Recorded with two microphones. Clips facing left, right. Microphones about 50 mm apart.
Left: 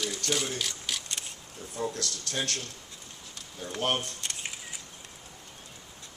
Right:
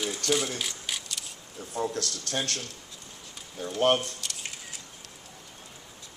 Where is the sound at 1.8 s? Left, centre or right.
Right.